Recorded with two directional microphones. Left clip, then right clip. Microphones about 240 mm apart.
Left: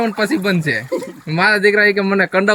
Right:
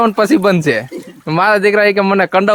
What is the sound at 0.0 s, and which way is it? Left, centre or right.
Speech, centre.